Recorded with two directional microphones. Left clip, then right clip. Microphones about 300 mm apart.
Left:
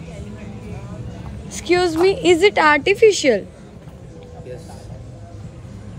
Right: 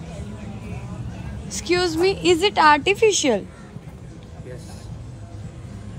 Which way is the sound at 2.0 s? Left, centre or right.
Centre.